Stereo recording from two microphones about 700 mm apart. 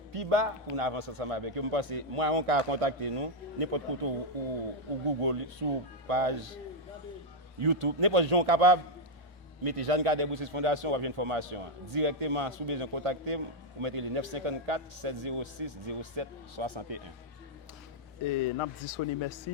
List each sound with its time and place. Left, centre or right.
0.1 s a man's voice: right
7.6 s a man's voice: right
18.3 s a man's voice: left